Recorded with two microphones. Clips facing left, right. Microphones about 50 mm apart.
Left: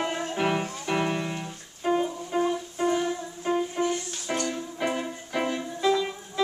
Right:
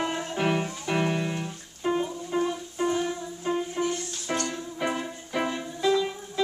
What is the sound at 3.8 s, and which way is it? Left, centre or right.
Music, centre.